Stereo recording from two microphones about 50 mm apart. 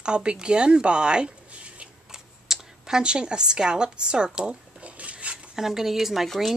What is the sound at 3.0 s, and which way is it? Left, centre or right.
Speech, centre.